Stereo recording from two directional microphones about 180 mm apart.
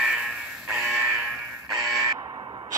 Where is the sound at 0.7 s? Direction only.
Centre (ahead or behind).